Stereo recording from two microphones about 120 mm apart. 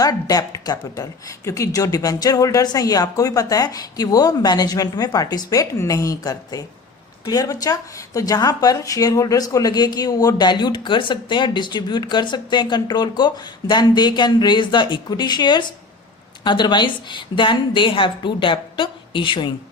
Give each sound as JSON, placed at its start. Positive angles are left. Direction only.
{"t": 0.0, "sound": "a woman's voice", "side_deg": 30}